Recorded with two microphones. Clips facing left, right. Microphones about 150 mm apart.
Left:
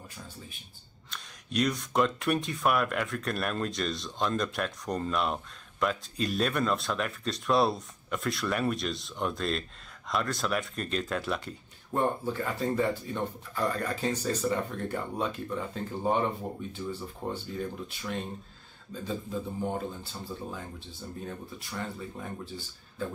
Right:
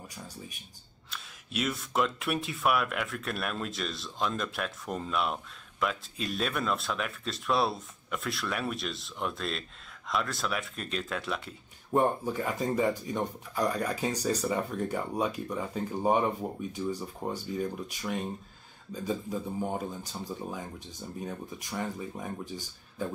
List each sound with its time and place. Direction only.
1.1 s speech: 5° right (ahead or behind)
11.9 s speech: 15° right (ahead or behind)